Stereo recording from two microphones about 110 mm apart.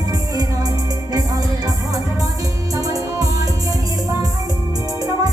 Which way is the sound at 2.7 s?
30° right (ahead or behind).